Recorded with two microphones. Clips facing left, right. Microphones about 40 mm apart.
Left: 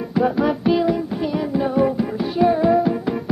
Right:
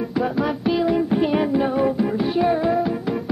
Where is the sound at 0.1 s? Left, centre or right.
Centre.